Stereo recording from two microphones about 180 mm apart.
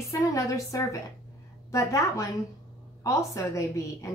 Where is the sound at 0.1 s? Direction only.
15° left (ahead or behind).